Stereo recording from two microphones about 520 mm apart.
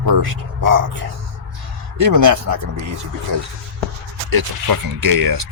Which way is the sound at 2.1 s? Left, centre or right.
Right.